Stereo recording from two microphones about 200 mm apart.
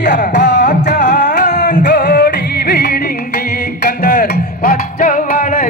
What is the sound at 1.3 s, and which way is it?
Music, 35° left (ahead or behind).